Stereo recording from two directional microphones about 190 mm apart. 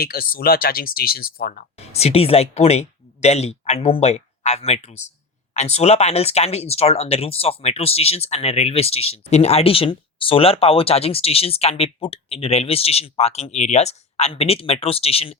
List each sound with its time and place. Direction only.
0.0 s speech: 50° left (ahead or behind)
1.8 s speech: 35° left (ahead or behind)